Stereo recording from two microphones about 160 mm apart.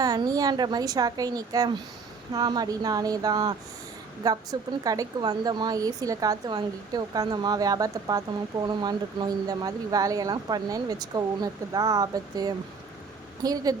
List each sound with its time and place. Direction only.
0.0 s speech: 25° right (ahead or behind)